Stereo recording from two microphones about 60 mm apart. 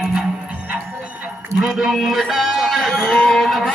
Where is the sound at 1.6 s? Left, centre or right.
Centre.